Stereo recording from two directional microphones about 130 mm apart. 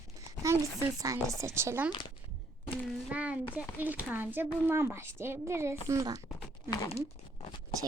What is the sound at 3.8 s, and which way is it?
A woman's voice, 15° right (ahead or behind).